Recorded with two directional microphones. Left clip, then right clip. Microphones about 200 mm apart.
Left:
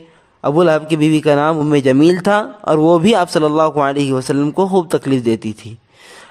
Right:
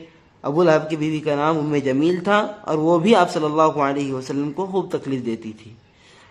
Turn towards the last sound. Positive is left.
turn(degrees=50)  # may be behind; listen again after turning